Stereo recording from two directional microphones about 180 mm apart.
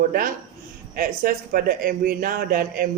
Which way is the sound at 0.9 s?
50° right (ahead or behind).